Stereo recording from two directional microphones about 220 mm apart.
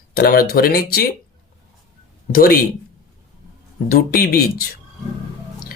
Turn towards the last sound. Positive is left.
turn(degrees=40)  # may be behind; listen again after turning